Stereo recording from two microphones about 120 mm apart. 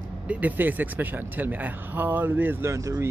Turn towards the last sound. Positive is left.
turn(degrees=-25)  # may be behind; listen again after turning